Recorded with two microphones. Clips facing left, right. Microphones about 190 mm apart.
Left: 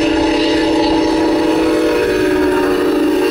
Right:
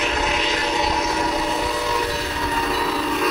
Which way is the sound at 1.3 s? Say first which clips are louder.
Left 12 dB; 65° left (ahead or behind).